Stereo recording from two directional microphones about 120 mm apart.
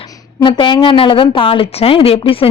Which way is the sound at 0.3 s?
40° left (ahead or behind).